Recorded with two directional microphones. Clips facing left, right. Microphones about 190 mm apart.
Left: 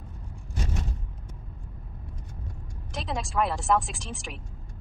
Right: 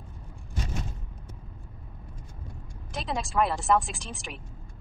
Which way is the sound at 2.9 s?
Centre (ahead or behind).